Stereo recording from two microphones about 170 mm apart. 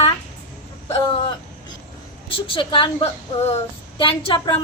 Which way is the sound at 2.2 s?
30° left (ahead or behind).